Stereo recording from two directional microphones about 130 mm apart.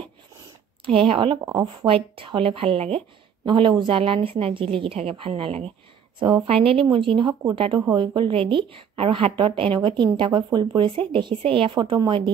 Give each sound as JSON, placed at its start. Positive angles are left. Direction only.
{"t": 0.8, "sound": "speech", "side_deg": -45}
{"t": 1.4, "sound": "speech", "side_deg": -30}
{"t": 1.9, "sound": "speech", "side_deg": -45}
{"t": 6.1, "sound": "speech", "side_deg": -40}